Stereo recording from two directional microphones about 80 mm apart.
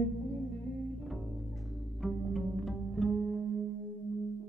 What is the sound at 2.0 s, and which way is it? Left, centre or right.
Music, centre.